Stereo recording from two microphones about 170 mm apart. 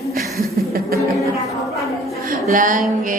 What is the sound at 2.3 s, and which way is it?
Speech, 50° right (ahead or behind).